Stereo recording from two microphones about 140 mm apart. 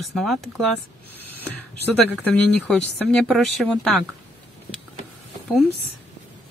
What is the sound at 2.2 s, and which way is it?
Speech, 10° left (ahead or behind).